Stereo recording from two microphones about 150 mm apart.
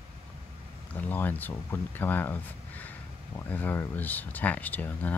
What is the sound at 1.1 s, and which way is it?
Speech, 15° left (ahead or behind).